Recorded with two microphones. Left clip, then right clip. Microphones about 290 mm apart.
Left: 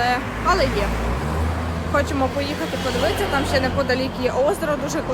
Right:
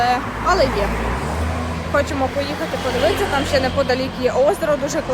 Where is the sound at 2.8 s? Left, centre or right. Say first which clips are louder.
Right 3 dB; right.